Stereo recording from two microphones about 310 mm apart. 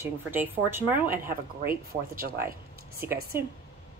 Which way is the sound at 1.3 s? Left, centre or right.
Right.